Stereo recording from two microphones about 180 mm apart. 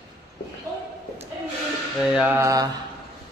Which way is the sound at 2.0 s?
5° right (ahead or behind).